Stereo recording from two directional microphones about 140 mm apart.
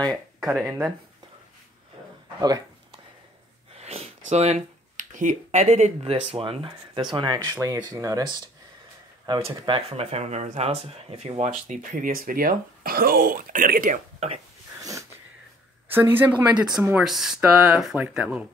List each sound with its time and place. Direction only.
0.0 s a sound: 5° left (ahead or behind)
0.5 s speech: 15° right (ahead or behind)
2.4 s a sound: 30° right (ahead or behind)
3.7 s speech: 50° right (ahead or behind); by 14.0 s 85° right
14.8 s wheeze: 25° right (ahead or behind)
15.9 s speech: 15° right (ahead or behind)